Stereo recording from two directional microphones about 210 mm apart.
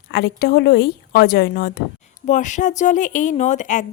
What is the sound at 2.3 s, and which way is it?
A woman's voice, 35° left (ahead or behind).